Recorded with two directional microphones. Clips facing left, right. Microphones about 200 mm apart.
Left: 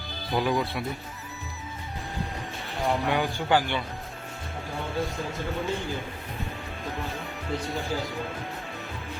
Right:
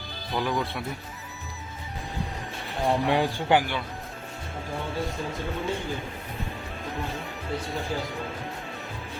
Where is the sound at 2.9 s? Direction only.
25° right (ahead or behind).